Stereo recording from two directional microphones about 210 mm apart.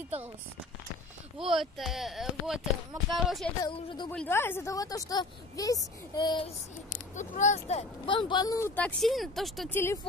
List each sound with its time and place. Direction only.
1.4 s speech: centre (ahead or behind)
3.6 s speech: 20° left (ahead or behind)
4.1 s speech: 10° left (ahead or behind)
7.2 s speech: 35° left (ahead or behind); by 9.8 s centre (ahead or behind)